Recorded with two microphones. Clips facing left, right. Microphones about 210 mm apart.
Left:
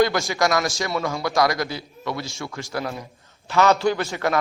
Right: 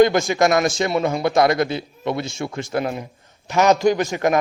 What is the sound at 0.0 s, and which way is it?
A man's voice, 20° right (ahead or behind).